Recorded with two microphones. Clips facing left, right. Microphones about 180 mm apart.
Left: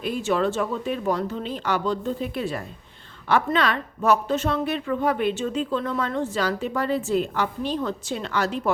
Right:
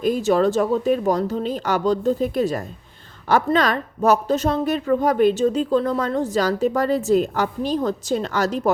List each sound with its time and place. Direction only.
0.0 s speech: 40° right (ahead or behind)